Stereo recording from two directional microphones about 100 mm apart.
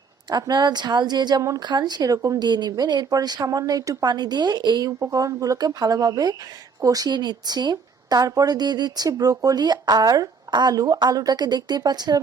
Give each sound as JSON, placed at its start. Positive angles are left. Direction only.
{"t": 0.3, "sound": "a woman's voice", "side_deg": -45}